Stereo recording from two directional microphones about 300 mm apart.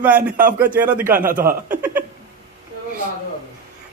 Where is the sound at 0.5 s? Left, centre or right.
Centre.